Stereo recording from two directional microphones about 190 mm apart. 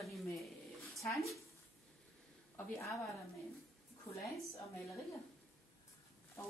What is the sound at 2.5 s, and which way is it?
Speech, 15° left (ahead or behind).